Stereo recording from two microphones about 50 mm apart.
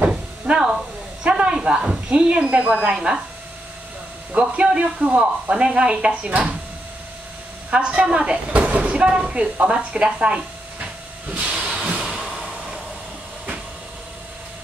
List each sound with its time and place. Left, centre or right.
0.0 s cupboard open or close: centre
1.2 s snake: right
2.0 s speech: right
4.3 s speech: right
7.7 s speech: right
11.2 s hiss: right
11.6 s music: centre
12.0 s a sound: centre